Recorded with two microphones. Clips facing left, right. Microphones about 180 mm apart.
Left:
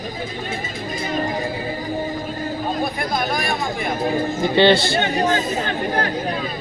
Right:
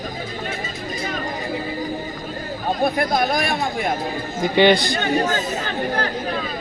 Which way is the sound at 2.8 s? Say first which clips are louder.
Right 4 dB; 55° right (ahead or behind).